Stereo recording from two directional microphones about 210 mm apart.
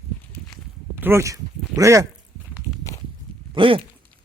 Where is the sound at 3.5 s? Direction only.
25° right (ahead or behind).